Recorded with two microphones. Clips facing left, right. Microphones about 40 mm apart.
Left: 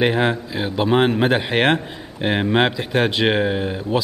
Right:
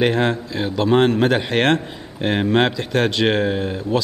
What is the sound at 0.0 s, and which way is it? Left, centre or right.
Speech, centre.